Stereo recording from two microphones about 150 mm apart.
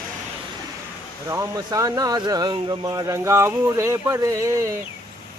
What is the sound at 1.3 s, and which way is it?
Speech, 20° right (ahead or behind).